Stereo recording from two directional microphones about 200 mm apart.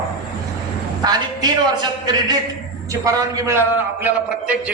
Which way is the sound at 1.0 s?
20° right (ahead or behind).